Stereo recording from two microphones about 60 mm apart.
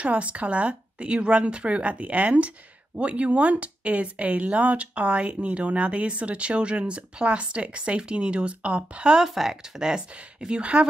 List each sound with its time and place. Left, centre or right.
0.0 s speech: right